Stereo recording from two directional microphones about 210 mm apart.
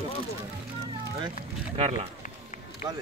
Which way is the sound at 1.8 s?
30° right (ahead or behind).